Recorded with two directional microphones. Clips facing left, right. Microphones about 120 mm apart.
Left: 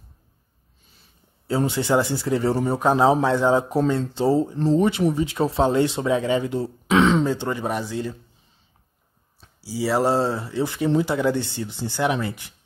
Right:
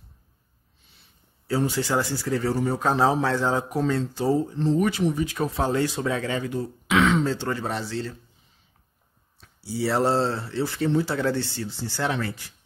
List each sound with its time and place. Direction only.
1.7 s speech: 20° left (ahead or behind)
7.2 s speech: 15° left (ahead or behind)
9.6 s speech: 5° left (ahead or behind)